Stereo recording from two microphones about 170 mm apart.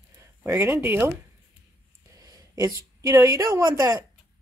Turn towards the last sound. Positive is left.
turn(degrees=-25)  # may be behind; listen again after turning